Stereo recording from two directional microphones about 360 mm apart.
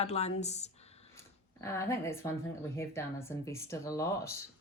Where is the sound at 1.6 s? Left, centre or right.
Centre.